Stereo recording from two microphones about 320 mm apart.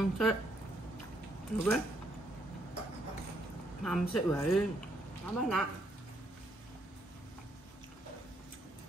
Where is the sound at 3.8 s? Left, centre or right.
Centre.